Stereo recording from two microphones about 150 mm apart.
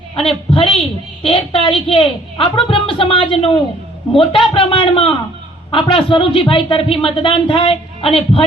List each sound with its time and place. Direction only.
0.2 s a woman's voice: 40° left (ahead or behind)